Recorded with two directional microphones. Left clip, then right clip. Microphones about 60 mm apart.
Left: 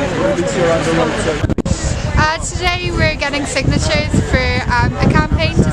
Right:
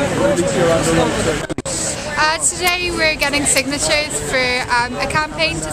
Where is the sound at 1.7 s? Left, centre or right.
Centre.